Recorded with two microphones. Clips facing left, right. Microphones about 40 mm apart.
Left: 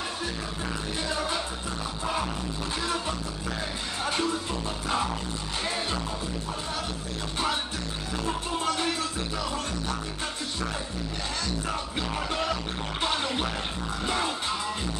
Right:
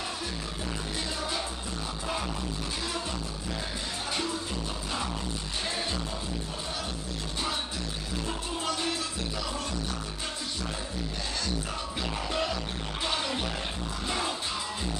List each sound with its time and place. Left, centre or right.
8.6 s music: left
13.0 s music: left